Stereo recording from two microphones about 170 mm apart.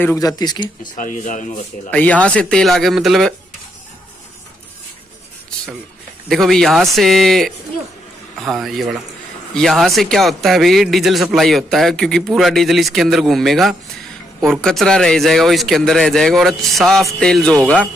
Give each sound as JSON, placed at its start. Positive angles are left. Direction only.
{"t": 0.0, "sound": "speech", "side_deg": 20}
{"t": 0.9, "sound": "speech", "side_deg": 50}
{"t": 1.9, "sound": "speech", "side_deg": 10}
{"t": 6.2, "sound": "speech", "side_deg": 0}